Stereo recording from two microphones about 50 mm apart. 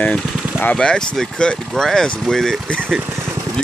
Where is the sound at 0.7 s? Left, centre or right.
Centre.